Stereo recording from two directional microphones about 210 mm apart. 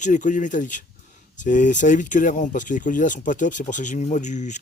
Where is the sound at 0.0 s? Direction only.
35° left (ahead or behind).